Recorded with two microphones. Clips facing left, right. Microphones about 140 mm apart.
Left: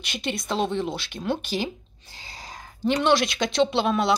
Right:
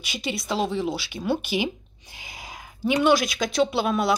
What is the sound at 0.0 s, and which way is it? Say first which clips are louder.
Speech: even; 5° right (ahead or behind).